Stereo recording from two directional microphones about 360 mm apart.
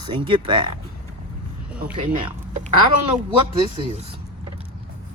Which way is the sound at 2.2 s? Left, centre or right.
Centre.